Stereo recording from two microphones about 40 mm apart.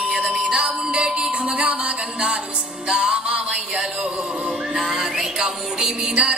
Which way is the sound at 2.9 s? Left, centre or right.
Right.